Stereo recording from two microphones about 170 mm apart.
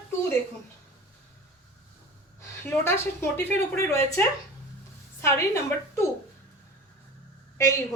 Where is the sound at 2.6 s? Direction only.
15° left (ahead or behind).